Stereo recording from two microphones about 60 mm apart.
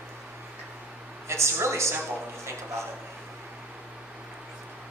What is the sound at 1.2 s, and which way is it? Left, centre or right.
Speech, right.